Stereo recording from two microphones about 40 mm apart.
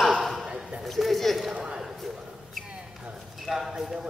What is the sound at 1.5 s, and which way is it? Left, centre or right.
Speech, right.